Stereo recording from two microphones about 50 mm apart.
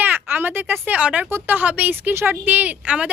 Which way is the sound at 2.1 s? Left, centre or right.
Right.